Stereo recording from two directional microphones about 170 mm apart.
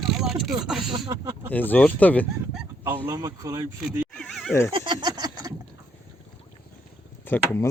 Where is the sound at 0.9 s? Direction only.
30° right (ahead or behind).